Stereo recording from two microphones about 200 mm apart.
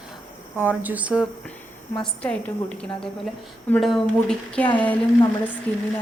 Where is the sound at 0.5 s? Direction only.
10° right (ahead or behind).